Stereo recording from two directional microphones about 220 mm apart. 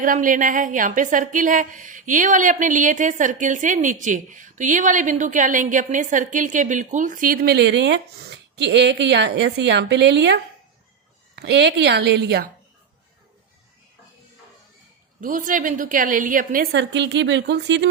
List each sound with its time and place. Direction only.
0.0 s a woman's voice: 35° right (ahead or behind)
15.2 s a woman's voice: 35° right (ahead or behind); by 17.8 s 55° right (ahead or behind)